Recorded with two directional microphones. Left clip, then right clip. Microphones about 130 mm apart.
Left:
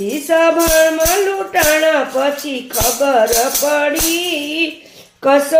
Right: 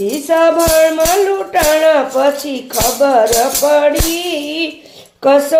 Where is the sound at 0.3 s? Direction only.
30° right (ahead or behind).